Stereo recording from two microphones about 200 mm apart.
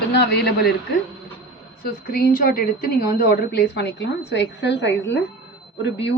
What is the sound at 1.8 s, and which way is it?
A woman's voice, 45° left (ahead or behind).